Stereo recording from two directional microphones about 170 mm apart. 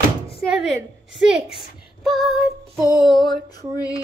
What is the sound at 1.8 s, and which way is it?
Child singing, centre (ahead or behind).